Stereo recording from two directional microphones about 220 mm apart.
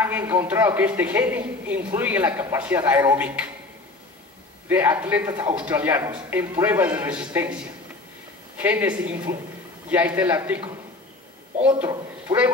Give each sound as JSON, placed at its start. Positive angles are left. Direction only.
{"t": 0.0, "sound": "a man's voice", "side_deg": -10}
{"t": 4.6, "sound": "a man's voice", "side_deg": -10}
{"t": 8.5, "sound": "a man's voice", "side_deg": -10}
{"t": 11.8, "sound": "speech", "side_deg": -15}